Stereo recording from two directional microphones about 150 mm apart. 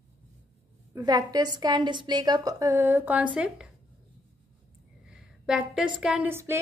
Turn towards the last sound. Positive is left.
turn(degrees=-15)  # may be behind; listen again after turning